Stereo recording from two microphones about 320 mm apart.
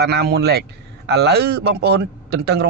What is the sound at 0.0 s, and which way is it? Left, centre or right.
A man's voice, right.